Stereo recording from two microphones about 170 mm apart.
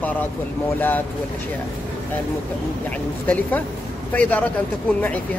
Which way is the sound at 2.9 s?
10° left (ahead or behind).